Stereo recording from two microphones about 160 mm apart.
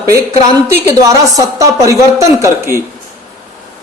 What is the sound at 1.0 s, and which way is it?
Speech, 20° right (ahead or behind).